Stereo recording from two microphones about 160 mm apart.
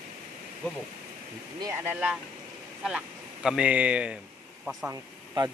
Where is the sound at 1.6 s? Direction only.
15° right (ahead or behind).